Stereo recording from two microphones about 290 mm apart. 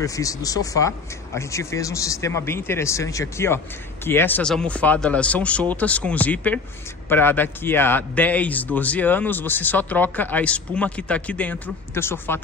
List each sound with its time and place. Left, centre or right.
0.0 s a man's voice: centre